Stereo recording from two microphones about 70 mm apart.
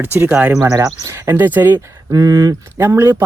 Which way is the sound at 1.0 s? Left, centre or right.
Right.